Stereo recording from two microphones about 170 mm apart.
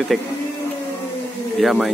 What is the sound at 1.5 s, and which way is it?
Speech, centre (ahead or behind).